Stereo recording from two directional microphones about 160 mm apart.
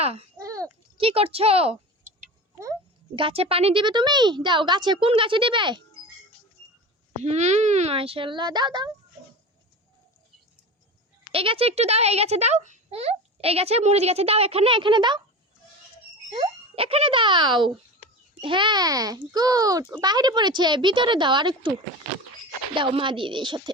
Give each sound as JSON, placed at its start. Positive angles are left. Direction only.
{"t": 0.0, "sound": "a child's voice", "side_deg": -40}
{"t": 0.3, "sound": "a sound", "side_deg": -20}
{"t": 0.9, "sound": "a child's voice", "side_deg": -35}
{"t": 3.2, "sound": "a child's voice", "side_deg": -35}
{"t": 7.2, "sound": "a child's voice", "side_deg": -45}
{"t": 11.3, "sound": "a child's voice", "side_deg": -35}
{"t": 16.3, "sound": "speech", "side_deg": -35}
{"t": 22.7, "sound": "a child's voice", "side_deg": -35}